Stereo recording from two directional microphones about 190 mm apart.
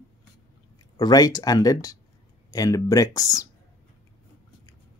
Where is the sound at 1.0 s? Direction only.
20° left (ahead or behind).